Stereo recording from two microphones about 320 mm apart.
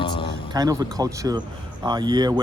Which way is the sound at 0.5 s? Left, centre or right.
Centre.